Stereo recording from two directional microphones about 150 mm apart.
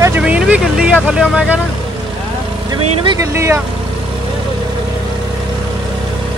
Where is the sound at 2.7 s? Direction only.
25° right (ahead or behind).